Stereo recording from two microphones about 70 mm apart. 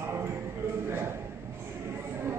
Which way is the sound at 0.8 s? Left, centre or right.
Right.